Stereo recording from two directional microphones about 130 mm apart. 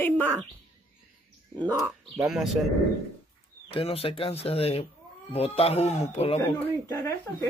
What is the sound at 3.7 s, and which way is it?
Speech, 45° left (ahead or behind).